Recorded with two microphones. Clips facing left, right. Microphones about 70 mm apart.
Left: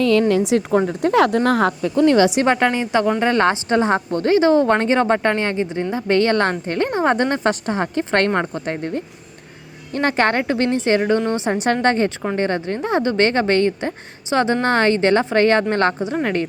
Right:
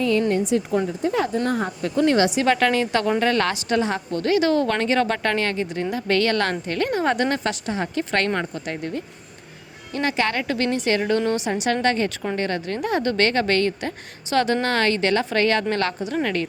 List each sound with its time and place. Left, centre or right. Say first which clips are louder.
0.0 s speech: left 5 dB; left
0.7 s speech: left 5 dB; left
1.5 s speech: left 7 dB; left
2.4 s a woman's voice: left 2 dB; left
7.5 s speech: left 4 dB; left
10.4 s a woman's voice: left 4 dB; left